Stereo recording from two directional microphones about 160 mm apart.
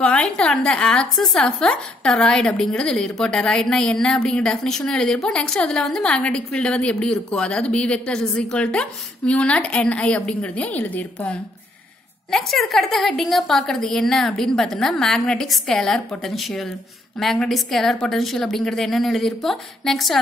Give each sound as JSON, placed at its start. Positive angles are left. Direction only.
{"t": 0.0, "sound": "a woman's voice", "side_deg": 5}